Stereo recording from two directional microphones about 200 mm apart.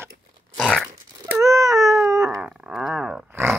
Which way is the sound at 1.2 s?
15° right (ahead or behind).